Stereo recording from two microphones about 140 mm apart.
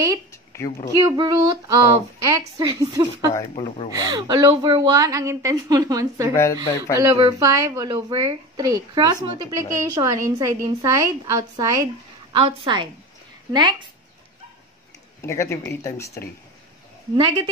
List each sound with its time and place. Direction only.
0.3 s a sound: 20° left (ahead or behind)
0.9 s a woman's voice: 30° right (ahead or behind)
6.3 s speech: 20° left (ahead or behind)
7.0 s a woman's voice: 25° right (ahead or behind)
15.2 s speech: 20° left (ahead or behind)
17.2 s a woman's voice: 30° right (ahead or behind)